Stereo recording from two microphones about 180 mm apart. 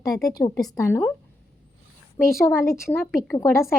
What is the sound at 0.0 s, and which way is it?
A woman's voice, 20° left (ahead or behind).